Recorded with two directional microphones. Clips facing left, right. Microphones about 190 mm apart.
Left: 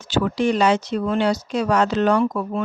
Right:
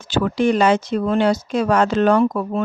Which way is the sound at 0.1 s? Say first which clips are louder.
Right 2 dB; 55° right (ahead or behind).